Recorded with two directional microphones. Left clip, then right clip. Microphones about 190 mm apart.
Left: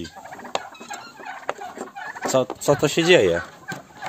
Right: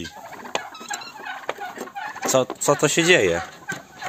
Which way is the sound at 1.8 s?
15° left (ahead or behind).